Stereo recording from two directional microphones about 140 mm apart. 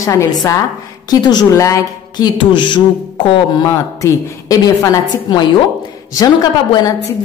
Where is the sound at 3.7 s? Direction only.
20° left (ahead or behind).